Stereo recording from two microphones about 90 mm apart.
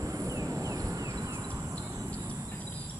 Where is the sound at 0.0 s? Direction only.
35° right (ahead or behind).